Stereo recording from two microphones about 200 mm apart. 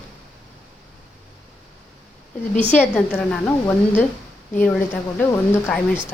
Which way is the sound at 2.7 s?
10° left (ahead or behind).